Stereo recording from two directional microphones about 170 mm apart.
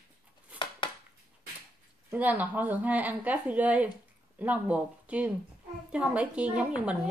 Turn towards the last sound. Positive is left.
turn(degrees=-5)  # may be behind; listen again after turning